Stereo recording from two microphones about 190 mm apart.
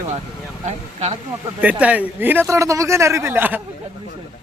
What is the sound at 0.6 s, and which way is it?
Speech, 35° right (ahead or behind).